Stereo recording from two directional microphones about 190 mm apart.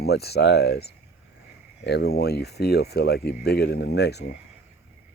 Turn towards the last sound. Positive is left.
turn(degrees=60)  # may be behind; listen again after turning